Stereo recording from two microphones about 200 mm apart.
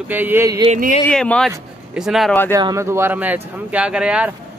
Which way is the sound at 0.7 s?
40° right (ahead or behind).